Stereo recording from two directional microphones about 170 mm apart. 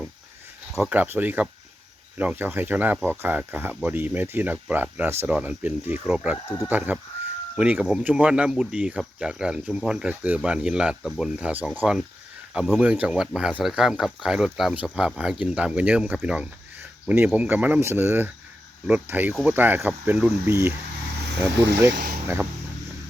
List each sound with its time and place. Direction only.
0.7 s speech: 5° right (ahead or behind)
19.3 s speech: centre (ahead or behind)
19.5 s speech: 10° right (ahead or behind)
21.5 s speech: 80° right